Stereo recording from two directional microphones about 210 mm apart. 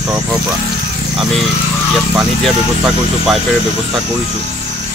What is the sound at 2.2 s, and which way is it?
Speech, centre (ahead or behind).